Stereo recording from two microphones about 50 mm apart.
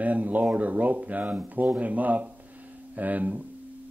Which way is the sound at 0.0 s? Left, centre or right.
Right.